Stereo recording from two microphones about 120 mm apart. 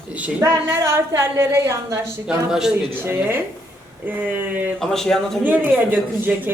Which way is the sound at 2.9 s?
20° right (ahead or behind).